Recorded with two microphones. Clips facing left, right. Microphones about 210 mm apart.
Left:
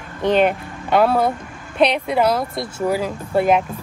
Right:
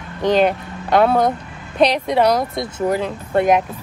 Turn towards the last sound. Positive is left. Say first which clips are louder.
# right 1 dB
turn(degrees=5)  # may be behind; listen again after turning